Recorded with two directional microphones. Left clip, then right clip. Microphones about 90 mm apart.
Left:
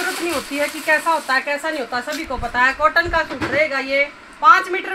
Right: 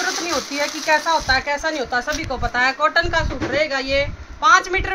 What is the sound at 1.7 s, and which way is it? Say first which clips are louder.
Speech: right 2 dB; 50° right (ahead or behind).